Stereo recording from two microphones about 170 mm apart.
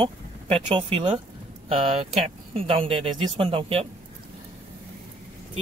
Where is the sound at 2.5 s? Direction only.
35° right (ahead or behind).